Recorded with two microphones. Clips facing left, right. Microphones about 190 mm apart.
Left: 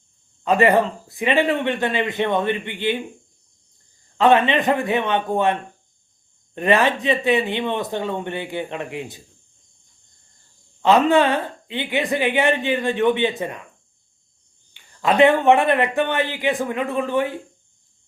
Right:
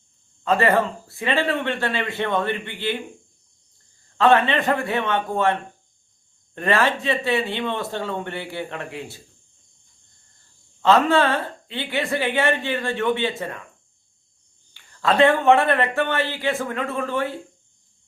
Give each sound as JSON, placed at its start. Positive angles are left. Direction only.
{"t": 0.4, "sound": "speech", "side_deg": 15}
{"t": 4.2, "sound": "speech", "side_deg": 15}
{"t": 10.8, "sound": "speech", "side_deg": 15}
{"t": 14.7, "sound": "speech", "side_deg": 15}